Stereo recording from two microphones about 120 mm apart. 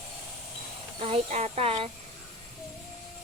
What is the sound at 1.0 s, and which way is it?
Speech, 60° right (ahead or behind).